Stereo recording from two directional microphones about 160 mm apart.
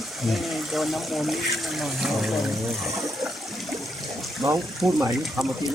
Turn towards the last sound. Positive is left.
turn(degrees=0)  # may be behind; listen again after turning